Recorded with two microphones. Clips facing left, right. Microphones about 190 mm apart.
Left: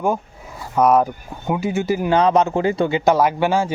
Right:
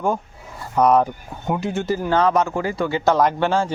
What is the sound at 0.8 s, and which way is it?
Speech, 5° left (ahead or behind).